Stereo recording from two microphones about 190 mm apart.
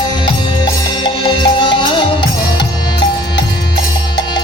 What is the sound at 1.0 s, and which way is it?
Music, 25° left (ahead or behind).